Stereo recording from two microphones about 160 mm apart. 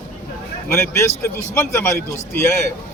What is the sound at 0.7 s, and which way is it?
A man's voice, 15° left (ahead or behind).